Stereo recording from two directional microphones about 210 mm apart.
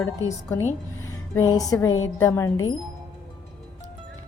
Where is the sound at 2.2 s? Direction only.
15° left (ahead or behind).